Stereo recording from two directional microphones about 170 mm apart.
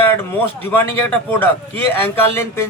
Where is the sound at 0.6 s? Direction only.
10° left (ahead or behind).